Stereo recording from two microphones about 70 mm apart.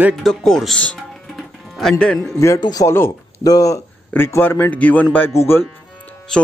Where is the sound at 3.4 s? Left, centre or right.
Left.